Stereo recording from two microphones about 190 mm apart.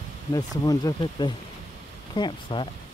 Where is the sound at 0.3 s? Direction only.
20° left (ahead or behind).